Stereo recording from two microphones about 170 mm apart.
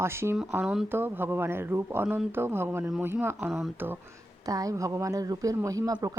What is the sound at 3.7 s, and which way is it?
Speech, 10° right (ahead or behind).